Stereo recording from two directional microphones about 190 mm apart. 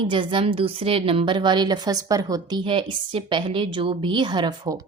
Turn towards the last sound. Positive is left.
turn(degrees=-20)  # may be behind; listen again after turning